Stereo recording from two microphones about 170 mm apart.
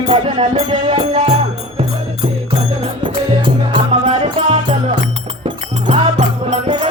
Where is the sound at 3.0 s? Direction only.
30° right (ahead or behind).